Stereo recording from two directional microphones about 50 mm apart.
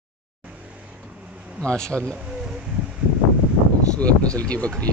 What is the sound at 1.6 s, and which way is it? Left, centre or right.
Speech, centre.